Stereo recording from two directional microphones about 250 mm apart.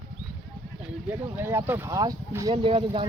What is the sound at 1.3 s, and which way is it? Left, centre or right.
Speech, centre.